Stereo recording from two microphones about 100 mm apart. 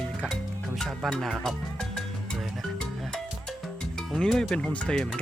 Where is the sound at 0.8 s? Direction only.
5° left (ahead or behind).